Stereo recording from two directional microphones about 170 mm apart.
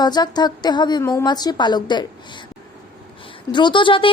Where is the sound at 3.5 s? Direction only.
30° left (ahead or behind).